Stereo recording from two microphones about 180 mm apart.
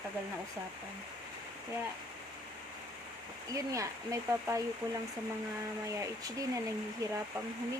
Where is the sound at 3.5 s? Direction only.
20° right (ahead or behind).